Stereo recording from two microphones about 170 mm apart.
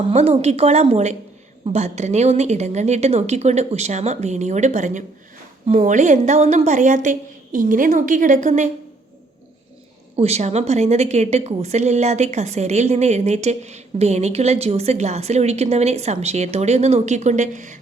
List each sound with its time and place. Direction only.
0.1 s a woman's voice: 40° right (ahead or behind)
10.2 s a woman's voice: 40° right (ahead or behind)